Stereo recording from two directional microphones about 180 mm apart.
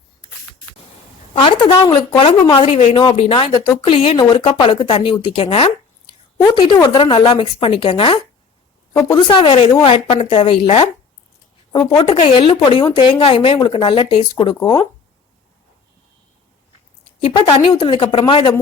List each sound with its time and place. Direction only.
1.4 s speech: 30° left (ahead or behind)
17.2 s speech: 25° left (ahead or behind)